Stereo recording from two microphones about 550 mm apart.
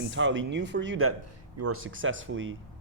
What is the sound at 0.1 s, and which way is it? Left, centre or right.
Speech, centre.